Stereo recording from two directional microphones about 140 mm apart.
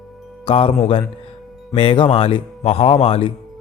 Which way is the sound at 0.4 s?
45° left (ahead or behind).